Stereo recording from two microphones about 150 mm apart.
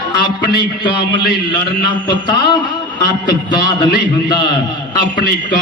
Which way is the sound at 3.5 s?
30° left (ahead or behind).